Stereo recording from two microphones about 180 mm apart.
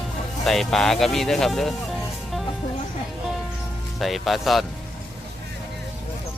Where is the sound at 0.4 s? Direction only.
Centre (ahead or behind).